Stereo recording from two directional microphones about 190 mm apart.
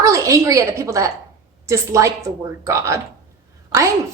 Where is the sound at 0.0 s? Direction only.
15° right (ahead or behind).